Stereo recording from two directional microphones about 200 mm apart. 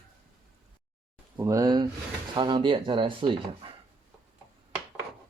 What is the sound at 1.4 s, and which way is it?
Speech, 15° right (ahead or behind).